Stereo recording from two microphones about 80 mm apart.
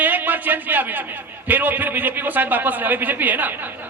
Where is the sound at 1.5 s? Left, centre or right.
Right.